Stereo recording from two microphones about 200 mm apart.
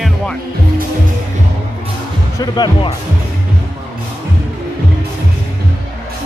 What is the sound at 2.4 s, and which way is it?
Speech, 20° left (ahead or behind).